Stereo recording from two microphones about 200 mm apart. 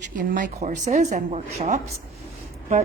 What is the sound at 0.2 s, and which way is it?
A woman's voice, 40° right (ahead or behind).